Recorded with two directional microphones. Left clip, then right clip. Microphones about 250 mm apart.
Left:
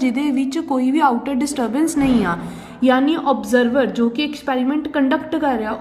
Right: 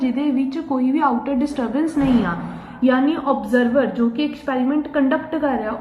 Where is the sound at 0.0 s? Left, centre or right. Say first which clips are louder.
Left 1 dB; left.